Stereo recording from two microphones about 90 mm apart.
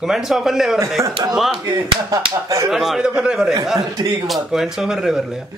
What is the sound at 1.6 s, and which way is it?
Speech, 45° right (ahead or behind).